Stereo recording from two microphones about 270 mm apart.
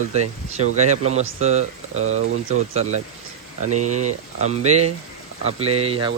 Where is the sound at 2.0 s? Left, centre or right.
Right.